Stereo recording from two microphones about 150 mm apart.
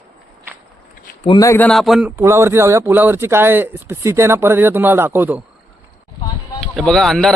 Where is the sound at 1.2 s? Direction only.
25° left (ahead or behind).